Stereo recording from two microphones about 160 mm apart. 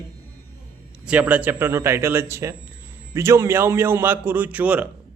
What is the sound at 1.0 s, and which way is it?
A man's voice, 10° right (ahead or behind).